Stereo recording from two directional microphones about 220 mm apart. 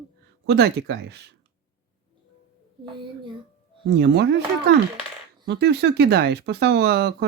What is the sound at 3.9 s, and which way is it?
Speech, 50° right (ahead or behind).